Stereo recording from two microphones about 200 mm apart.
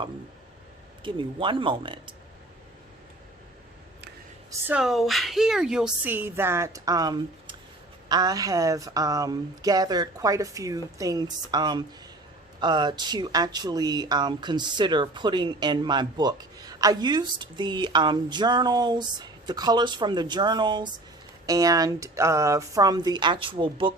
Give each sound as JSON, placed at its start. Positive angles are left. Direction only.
{"t": 1.0, "sound": "speech", "side_deg": -25}
{"t": 4.6, "sound": "a woman's voice", "side_deg": -5}